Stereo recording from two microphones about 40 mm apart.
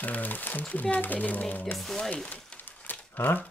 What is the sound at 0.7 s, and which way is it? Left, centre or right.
Speech, left.